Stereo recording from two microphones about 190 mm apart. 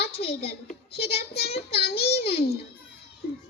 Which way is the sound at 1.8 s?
55° left (ahead or behind).